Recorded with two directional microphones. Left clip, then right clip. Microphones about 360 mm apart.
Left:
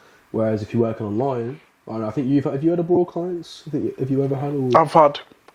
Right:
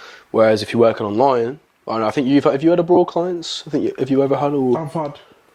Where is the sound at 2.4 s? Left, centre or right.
Centre.